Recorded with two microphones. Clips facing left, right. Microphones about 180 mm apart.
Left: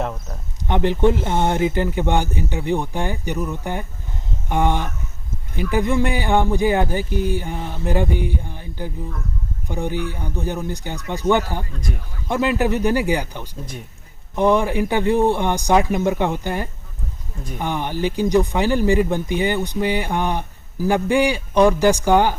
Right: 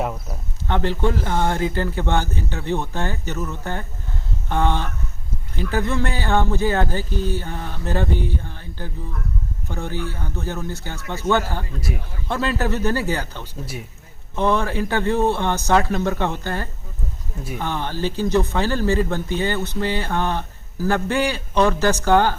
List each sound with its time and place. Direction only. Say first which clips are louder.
0.0 s speech: even; 5° right (ahead or behind)
0.7 s speech: left 4 dB; 15° left (ahead or behind)
11.8 s speech: right 1 dB; 5° right (ahead or behind)
12.3 s speech: left 4 dB; 15° left (ahead or behind)